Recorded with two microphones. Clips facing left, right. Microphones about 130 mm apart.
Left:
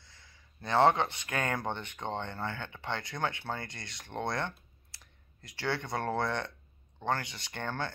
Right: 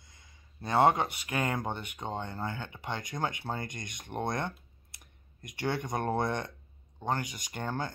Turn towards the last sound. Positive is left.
turn(degrees=-10)  # may be behind; listen again after turning